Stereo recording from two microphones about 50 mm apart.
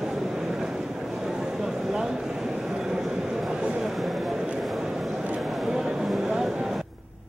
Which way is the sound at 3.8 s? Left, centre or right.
Centre.